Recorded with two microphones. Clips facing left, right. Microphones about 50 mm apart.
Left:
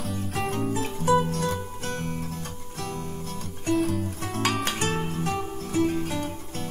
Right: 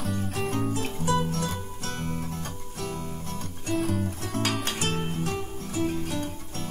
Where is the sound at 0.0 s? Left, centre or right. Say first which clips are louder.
Even; centre.